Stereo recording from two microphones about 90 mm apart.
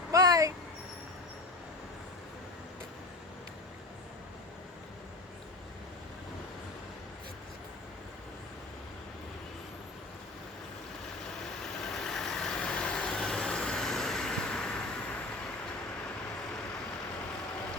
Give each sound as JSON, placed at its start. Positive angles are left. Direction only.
{"t": 0.1, "sound": "vehicle", "side_deg": -40}
{"t": 11.9, "sound": "vehicle", "side_deg": 5}